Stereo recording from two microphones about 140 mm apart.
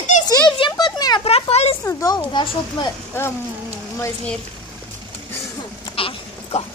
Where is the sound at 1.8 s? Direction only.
20° left (ahead or behind).